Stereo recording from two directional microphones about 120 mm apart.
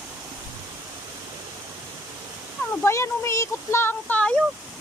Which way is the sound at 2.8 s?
25° left (ahead or behind).